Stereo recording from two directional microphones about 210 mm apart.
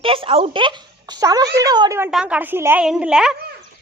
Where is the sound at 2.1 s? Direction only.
5° right (ahead or behind).